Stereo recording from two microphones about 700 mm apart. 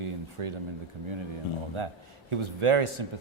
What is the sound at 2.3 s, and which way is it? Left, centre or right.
Speech, right.